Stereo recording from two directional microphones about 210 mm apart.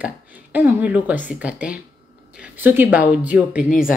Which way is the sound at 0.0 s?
10° right (ahead or behind).